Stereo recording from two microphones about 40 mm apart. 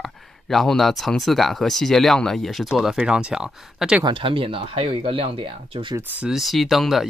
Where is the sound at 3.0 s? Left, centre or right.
Right.